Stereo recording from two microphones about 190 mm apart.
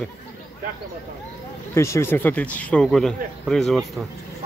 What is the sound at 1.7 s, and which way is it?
Speech, 15° left (ahead or behind).